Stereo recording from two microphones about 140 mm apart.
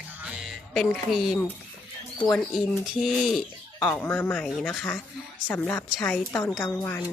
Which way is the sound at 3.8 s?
10° left (ahead or behind).